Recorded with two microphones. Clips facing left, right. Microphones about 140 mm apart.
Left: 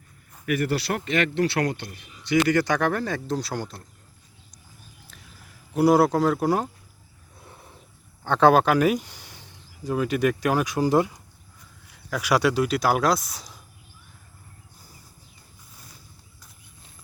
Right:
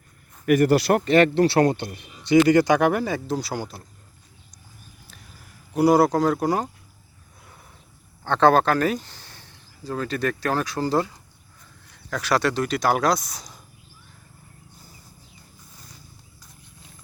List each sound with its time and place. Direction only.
0.4 s speech: 45° right (ahead or behind); by 3.8 s 5° right (ahead or behind)
5.7 s speech: centre (ahead or behind)
8.2 s speech: 10° left (ahead or behind)